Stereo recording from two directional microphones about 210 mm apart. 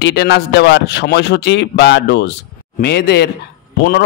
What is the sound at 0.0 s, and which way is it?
A man's voice, 55° left (ahead or behind).